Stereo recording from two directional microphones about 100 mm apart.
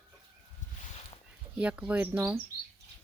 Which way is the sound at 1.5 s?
10° right (ahead or behind).